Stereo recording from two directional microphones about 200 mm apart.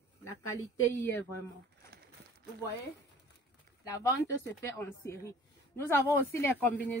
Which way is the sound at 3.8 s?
15° left (ahead or behind).